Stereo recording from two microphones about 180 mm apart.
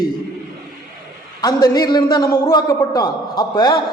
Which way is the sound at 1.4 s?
20° left (ahead or behind).